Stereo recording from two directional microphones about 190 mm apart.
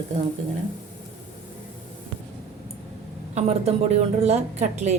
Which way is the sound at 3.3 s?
35° right (ahead or behind).